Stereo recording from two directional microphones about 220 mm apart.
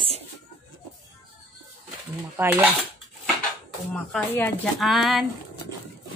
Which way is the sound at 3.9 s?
5° left (ahead or behind).